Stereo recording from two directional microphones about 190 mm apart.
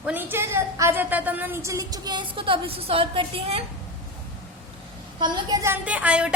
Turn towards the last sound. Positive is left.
turn(degrees=-5)  # may be behind; listen again after turning